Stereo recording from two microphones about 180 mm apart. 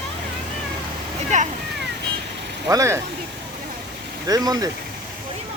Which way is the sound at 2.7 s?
15° right (ahead or behind).